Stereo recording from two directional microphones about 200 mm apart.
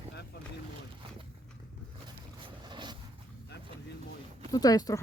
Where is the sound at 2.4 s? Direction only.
20° right (ahead or behind).